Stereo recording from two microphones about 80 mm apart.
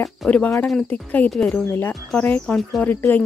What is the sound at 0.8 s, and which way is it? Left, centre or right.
Speech, centre.